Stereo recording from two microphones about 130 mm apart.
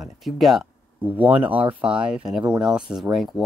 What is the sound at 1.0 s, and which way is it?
Speech, 10° right (ahead or behind).